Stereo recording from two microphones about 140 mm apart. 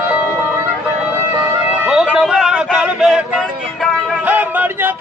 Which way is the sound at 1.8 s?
5° right (ahead or behind).